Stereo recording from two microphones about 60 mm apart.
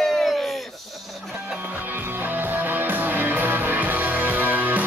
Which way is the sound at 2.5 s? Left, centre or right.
Right.